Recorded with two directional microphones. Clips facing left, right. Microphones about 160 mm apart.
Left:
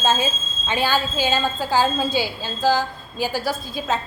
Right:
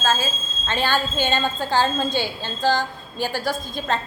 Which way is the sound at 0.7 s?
10° left (ahead or behind).